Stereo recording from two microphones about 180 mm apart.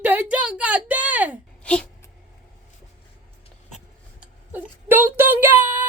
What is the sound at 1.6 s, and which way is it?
Wail, 5° left (ahead or behind).